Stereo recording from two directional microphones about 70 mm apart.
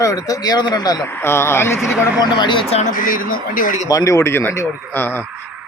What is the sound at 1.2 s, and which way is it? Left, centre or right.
Speech, left.